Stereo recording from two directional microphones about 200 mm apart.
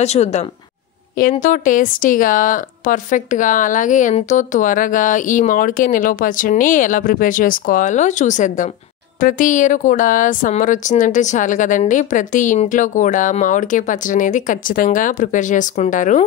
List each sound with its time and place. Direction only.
0.0 s speech: 35° left (ahead or behind)